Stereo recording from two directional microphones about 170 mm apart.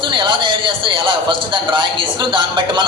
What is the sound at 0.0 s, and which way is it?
A man's voice, 30° right (ahead or behind).